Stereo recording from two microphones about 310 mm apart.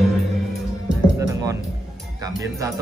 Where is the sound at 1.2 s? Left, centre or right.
Centre.